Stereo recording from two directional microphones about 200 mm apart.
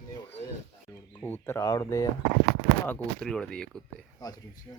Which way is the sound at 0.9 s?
10° left (ahead or behind).